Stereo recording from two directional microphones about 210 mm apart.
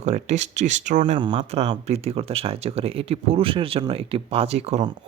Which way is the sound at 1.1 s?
25° right (ahead or behind).